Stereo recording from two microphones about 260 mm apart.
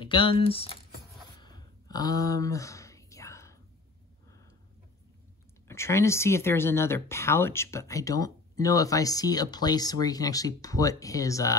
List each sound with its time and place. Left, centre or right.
0.0 s speech: centre
1.4 s a sound: centre
5.7 s speech: centre